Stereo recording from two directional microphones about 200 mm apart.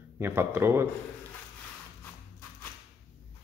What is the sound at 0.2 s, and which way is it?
Speech, 10° right (ahead or behind).